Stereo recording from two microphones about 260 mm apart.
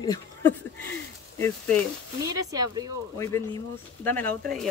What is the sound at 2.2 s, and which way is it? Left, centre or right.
Speech, centre.